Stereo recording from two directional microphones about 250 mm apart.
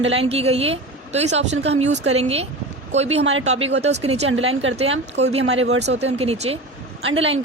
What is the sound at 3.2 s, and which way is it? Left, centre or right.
Speech, right.